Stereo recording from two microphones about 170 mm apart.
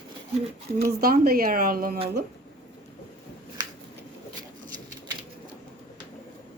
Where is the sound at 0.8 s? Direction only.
65° right (ahead or behind).